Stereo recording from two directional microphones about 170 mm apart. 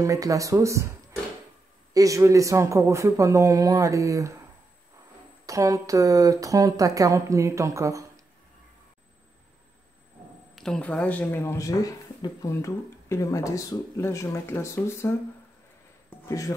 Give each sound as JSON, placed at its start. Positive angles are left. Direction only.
{"t": 0.0, "sound": "a woman's voice", "side_deg": -20}
{"t": 2.0, "sound": "a woman's voice", "side_deg": -20}
{"t": 5.5, "sound": "a woman's voice", "side_deg": -20}
{"t": 10.5, "sound": "speech", "side_deg": 5}
{"t": 16.3, "sound": "speech", "side_deg": 20}